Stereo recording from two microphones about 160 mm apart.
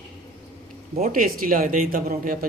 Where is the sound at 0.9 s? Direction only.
55° right (ahead or behind).